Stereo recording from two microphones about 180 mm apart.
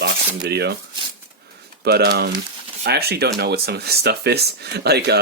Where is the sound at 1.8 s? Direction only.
65° right (ahead or behind).